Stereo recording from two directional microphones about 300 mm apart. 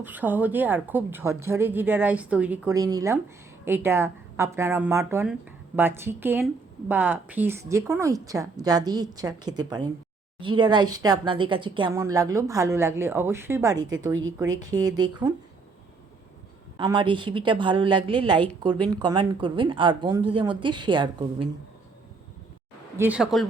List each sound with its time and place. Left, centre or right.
0.0 s speech: centre
13.7 s a woman's voice: right
14.3 s speech: centre
16.7 s speech: centre
23.0 s speech: centre